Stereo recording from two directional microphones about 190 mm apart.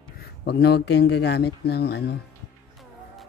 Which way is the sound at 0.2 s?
55° left (ahead or behind).